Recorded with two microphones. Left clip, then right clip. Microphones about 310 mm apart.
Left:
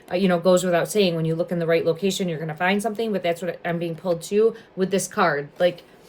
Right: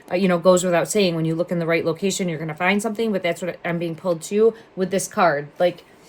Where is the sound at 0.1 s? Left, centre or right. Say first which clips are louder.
Right 2 dB; centre.